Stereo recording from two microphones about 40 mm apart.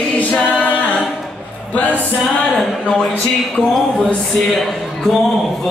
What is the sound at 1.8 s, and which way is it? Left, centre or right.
Music, left.